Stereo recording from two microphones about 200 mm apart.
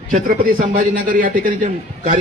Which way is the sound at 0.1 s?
40° right (ahead or behind).